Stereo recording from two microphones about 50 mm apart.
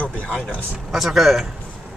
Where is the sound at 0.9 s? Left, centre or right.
Centre.